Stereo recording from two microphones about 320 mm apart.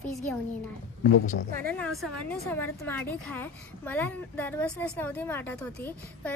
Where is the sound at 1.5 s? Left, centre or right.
Right.